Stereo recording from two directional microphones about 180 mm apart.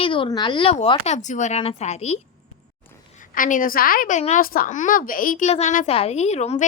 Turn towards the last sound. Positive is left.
turn(degrees=35)  # may be behind; listen again after turning